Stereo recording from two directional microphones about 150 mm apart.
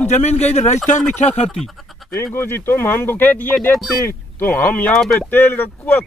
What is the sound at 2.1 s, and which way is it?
Speech, 15° left (ahead or behind).